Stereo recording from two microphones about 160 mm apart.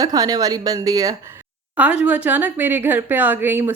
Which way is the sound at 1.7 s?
10° right (ahead or behind).